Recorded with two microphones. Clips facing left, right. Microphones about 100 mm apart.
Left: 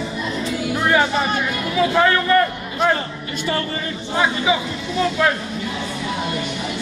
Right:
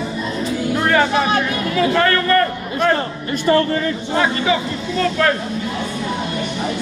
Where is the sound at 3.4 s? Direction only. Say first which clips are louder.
Right 9 dB; 50° right (ahead or behind).